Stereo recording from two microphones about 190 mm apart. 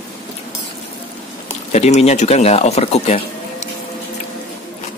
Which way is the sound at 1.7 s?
35° left (ahead or behind).